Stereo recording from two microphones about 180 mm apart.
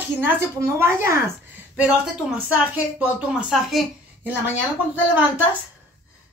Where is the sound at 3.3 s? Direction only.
5° right (ahead or behind).